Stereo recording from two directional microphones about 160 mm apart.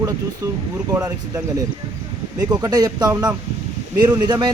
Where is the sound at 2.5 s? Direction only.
25° right (ahead or behind).